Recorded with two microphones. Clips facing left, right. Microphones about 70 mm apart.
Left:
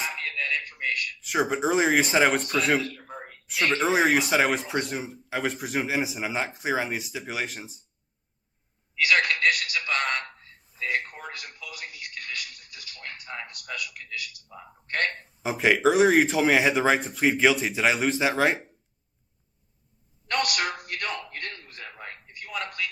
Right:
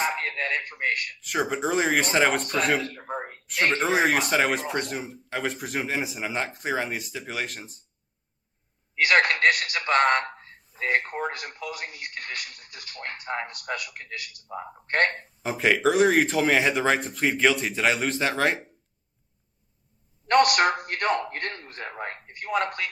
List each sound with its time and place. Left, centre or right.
0.0 s a man's voice: right
1.2 s speech: centre
2.8 s speech: right
3.8 s speech: centre
9.0 s a man's voice: right
15.4 s speech: centre
20.2 s a man's voice: right
21.8 s a man's voice: right